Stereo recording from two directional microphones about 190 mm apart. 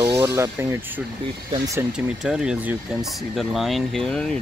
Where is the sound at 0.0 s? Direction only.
20° right (ahead or behind).